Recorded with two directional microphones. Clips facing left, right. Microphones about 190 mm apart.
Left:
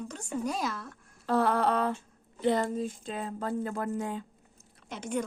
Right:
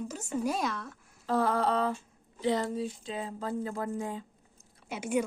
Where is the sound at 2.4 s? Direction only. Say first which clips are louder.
Left 2 dB; 50° left (ahead or behind); by 4.3 s 70° left (ahead or behind).